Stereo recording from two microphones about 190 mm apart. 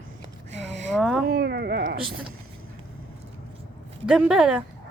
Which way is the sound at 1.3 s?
60° right (ahead or behind).